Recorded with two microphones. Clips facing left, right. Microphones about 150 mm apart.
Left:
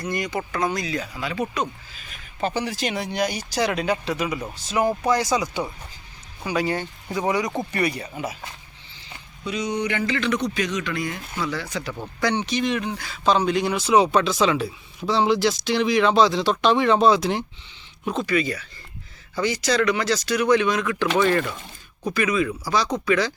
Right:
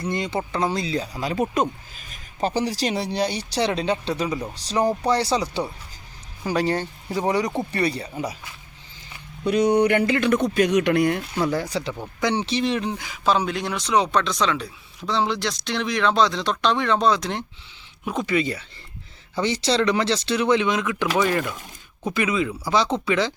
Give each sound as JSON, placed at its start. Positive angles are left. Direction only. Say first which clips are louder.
{"t": 0.0, "sound": "speech", "louder": "right 1 dB", "side_deg": -25}
{"t": 9.4, "sound": "speech", "louder": "right 8 dB", "side_deg": -55}
{"t": 12.2, "sound": "speech", "louder": "even", "side_deg": -30}
{"t": 12.9, "sound": "speech", "louder": "right 1 dB", "side_deg": -15}
{"t": 13.2, "sound": "speech", "louder": "left 2 dB", "side_deg": -5}
{"t": 18.0, "sound": "speech", "louder": "left 1 dB", "side_deg": -10}
{"t": 18.3, "sound": "speech", "louder": "right 2 dB", "side_deg": -25}
{"t": 21.4, "sound": "speech", "louder": "even", "side_deg": 0}
{"t": 22.0, "sound": "speech", "louder": "left 1 dB", "side_deg": -20}